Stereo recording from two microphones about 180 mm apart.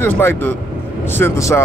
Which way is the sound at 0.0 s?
15° left (ahead or behind).